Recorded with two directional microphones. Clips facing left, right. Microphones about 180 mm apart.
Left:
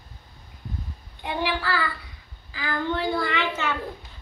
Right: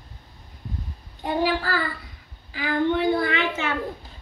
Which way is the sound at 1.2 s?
40° right (ahead or behind).